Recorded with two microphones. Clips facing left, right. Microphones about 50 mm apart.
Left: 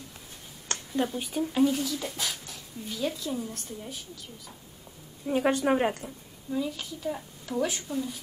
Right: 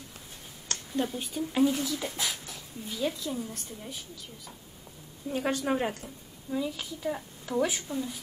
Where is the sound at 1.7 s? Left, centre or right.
Centre.